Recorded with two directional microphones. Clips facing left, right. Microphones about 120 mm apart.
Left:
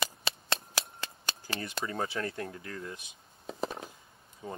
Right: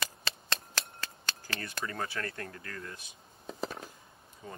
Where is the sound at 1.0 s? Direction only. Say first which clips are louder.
Left 2 dB; 20° left (ahead or behind).